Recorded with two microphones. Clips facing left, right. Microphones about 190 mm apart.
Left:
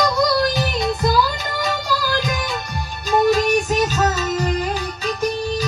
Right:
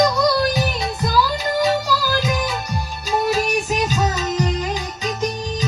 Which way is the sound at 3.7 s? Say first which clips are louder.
Left 2 dB; 15° right (ahead or behind).